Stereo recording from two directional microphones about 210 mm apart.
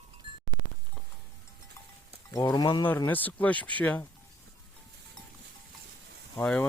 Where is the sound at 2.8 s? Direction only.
10° left (ahead or behind).